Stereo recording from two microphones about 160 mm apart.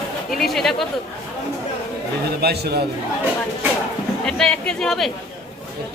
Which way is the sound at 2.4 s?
80° right.